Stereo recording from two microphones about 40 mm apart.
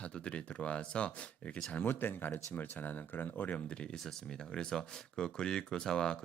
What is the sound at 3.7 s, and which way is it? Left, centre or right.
Speech, left.